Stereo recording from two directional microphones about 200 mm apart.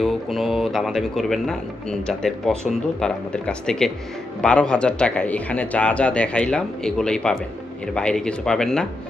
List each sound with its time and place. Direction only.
0.0 s speech: centre (ahead or behind)